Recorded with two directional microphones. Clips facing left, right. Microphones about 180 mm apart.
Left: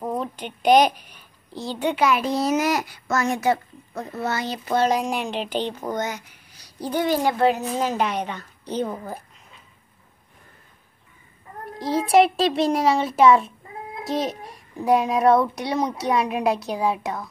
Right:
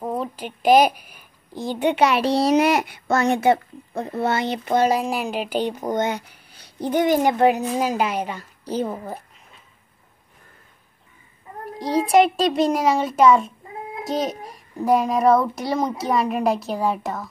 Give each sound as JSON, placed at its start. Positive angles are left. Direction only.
{"t": 0.0, "sound": "a woman's voice", "side_deg": -5}
{"t": 1.9, "sound": "a child's voice", "side_deg": -70}
{"t": 2.8, "sound": "a child's voice", "side_deg": -25}
{"t": 4.8, "sound": "a woman's voice", "side_deg": -5}
{"t": 5.9, "sound": "a woman's voice", "side_deg": -30}
{"t": 11.8, "sound": "a child's voice", "side_deg": 0}